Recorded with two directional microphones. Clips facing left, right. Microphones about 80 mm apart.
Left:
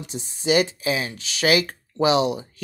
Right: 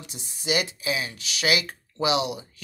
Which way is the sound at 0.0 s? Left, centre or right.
Left.